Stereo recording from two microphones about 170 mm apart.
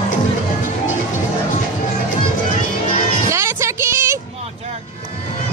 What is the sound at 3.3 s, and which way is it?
Music, 15° right (ahead or behind).